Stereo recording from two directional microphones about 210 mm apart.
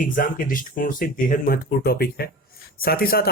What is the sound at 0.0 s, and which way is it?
Speech, 40° left (ahead or behind).